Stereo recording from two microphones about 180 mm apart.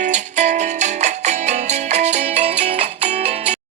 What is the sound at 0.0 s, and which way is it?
Music, 40° right (ahead or behind).